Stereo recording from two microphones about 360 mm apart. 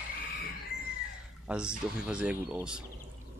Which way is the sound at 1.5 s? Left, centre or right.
Centre.